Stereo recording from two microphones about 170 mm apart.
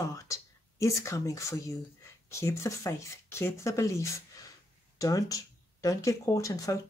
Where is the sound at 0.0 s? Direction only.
20° left (ahead or behind).